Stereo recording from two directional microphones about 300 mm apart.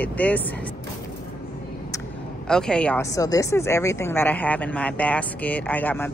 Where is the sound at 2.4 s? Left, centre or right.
Centre.